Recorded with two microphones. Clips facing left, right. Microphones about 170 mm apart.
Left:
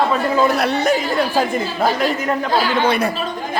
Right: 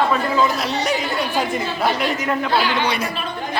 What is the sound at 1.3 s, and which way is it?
A man's voice, 40° left (ahead or behind).